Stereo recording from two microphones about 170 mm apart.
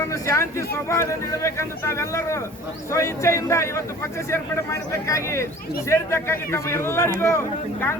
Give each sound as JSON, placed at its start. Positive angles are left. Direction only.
{"t": 0.1, "sound": "speech", "side_deg": 15}